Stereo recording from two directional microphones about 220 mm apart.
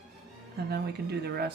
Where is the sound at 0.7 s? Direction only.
45° right (ahead or behind).